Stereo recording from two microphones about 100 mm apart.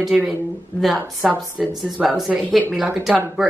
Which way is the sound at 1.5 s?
10° right (ahead or behind).